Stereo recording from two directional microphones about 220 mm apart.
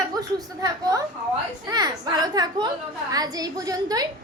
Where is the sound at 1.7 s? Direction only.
20° right (ahead or behind).